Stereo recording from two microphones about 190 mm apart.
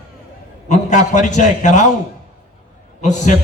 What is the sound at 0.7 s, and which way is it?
A man's voice, 40° left (ahead or behind).